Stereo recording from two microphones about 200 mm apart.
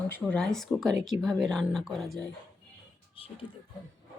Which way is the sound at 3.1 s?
25° left (ahead or behind).